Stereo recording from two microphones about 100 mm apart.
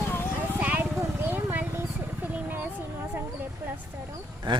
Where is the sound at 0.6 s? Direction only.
15° right (ahead or behind).